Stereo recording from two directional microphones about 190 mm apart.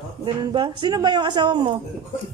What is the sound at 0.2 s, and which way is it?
Speech, 25° right (ahead or behind).